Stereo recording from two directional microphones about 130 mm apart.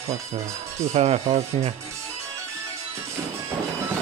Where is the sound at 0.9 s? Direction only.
55° right (ahead or behind).